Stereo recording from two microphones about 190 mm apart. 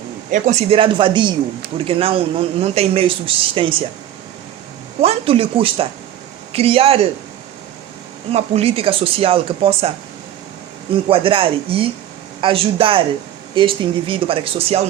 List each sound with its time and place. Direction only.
0.3 s speech: 40° right (ahead or behind)
4.9 s speech: 30° right (ahead or behind)
8.3 s speech: 30° right (ahead or behind)
11.1 s speech: 30° right (ahead or behind)